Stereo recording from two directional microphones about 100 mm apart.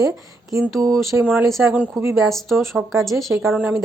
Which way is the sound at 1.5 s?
10° right (ahead or behind).